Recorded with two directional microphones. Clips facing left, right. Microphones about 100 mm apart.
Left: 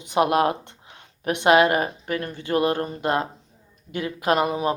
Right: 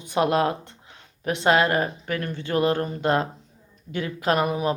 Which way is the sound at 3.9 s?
15° left (ahead or behind).